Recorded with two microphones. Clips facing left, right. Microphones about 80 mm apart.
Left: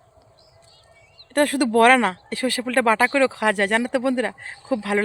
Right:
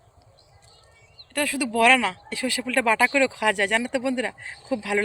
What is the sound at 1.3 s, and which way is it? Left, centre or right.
Speech, left.